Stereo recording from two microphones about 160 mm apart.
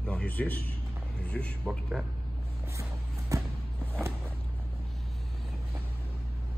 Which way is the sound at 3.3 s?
20° right (ahead or behind).